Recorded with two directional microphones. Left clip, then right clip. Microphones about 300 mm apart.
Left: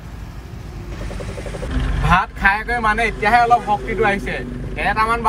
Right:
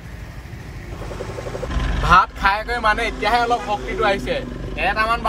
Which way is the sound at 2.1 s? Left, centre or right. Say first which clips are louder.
Right 1 dB; centre.